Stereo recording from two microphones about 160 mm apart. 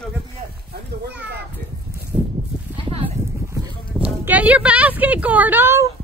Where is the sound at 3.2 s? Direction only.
15° right (ahead or behind).